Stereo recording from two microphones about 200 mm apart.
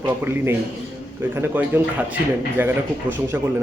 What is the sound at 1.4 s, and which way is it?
Speech, 10° right (ahead or behind).